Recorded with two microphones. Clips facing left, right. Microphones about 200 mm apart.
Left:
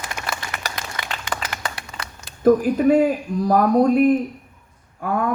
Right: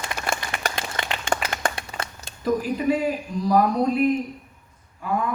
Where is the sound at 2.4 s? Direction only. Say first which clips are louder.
Left 7 dB; 50° left (ahead or behind).